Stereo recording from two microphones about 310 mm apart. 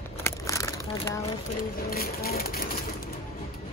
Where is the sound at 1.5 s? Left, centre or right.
Left.